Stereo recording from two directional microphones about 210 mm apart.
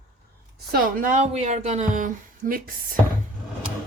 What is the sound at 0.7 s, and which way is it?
Speech, 40° right (ahead or behind).